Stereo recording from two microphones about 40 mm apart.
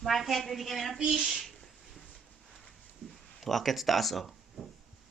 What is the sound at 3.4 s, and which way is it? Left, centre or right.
Speech, centre.